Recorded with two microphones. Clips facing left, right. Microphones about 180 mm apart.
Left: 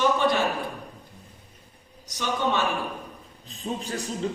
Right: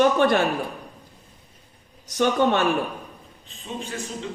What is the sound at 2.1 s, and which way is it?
Speech, 55° right (ahead or behind).